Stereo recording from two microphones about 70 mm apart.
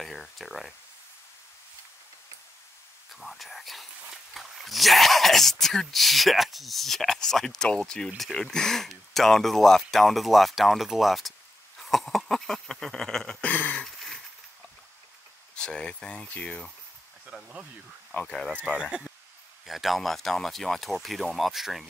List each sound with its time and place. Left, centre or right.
0.0 s speech: centre
3.1 s speech: centre
11.8 s a sound: centre
13.5 s a sound: left
13.7 s a sound: centre
15.5 s speech: centre
17.3 s speech: centre
18.2 s speech: centre
18.8 s speech: centre
19.6 s speech: centre